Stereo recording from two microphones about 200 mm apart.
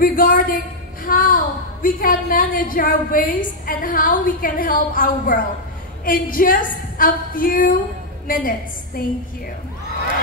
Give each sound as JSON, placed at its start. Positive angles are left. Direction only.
{"t": 0.0, "sound": "a woman's voice", "side_deg": 45}